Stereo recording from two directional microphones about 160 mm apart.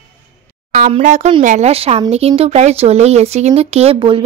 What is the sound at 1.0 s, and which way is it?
Speech, 50° right (ahead or behind).